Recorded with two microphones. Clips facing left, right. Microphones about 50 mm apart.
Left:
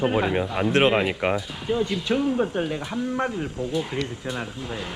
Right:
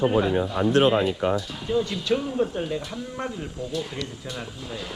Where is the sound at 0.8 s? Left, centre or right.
Left.